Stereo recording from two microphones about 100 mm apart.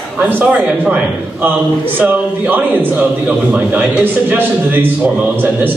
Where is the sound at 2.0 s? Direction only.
15° right (ahead or behind).